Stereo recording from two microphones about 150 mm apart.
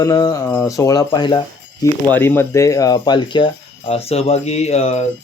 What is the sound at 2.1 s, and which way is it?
Speech, 15° left (ahead or behind).